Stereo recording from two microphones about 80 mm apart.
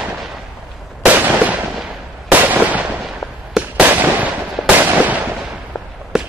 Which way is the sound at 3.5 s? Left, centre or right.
Centre.